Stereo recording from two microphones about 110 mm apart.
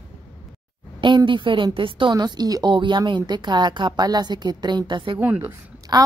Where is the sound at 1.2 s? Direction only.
50° right (ahead or behind).